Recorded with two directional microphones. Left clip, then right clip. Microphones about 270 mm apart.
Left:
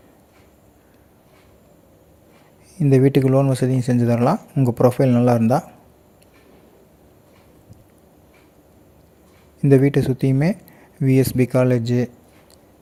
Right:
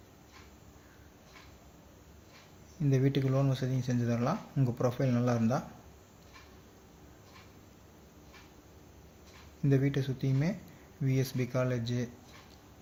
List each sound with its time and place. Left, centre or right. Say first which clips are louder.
2.7 s speech: left 15 dB; left
9.6 s speech: left 16 dB; left